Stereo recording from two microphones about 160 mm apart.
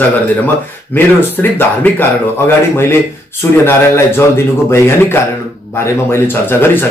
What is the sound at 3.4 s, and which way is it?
Speech, 15° left (ahead or behind).